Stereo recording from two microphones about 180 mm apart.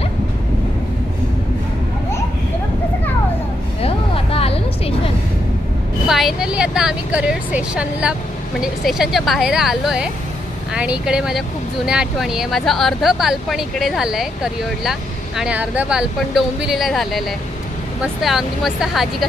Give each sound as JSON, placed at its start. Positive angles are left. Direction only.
{"t": 3.8, "sound": "vehicle", "side_deg": 30}
{"t": 6.0, "sound": "a woman's voice", "side_deg": 0}
{"t": 18.2, "sound": "speech", "side_deg": 0}